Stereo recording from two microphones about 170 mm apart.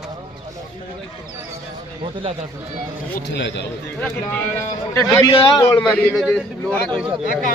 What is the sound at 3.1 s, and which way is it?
Speech, 85° left.